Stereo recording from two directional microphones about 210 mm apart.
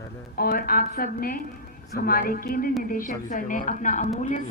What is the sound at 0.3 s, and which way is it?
A woman's voice, 45° left (ahead or behind).